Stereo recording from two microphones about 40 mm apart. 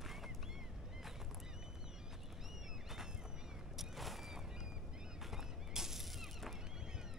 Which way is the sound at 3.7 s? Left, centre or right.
Centre.